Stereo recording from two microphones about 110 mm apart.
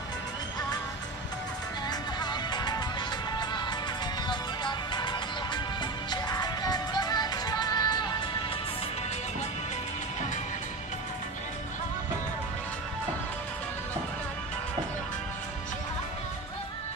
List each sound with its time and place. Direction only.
1.9 s music: 40° left (ahead or behind)